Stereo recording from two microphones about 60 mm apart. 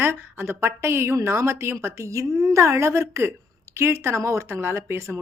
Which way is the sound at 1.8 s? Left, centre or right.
Right.